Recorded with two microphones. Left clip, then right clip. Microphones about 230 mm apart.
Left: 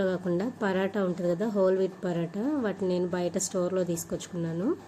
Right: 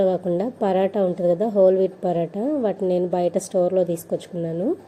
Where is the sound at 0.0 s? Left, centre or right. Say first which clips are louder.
Right 8 dB; centre.